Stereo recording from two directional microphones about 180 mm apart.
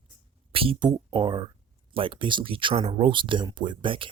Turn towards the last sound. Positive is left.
turn(degrees=-25)  # may be behind; listen again after turning